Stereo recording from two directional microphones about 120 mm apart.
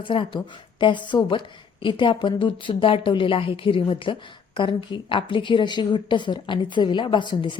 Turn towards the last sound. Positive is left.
turn(degrees=40)  # may be behind; listen again after turning